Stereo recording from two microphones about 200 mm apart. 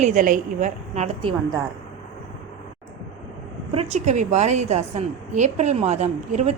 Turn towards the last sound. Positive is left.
turn(degrees=-35)  # may be behind; listen again after turning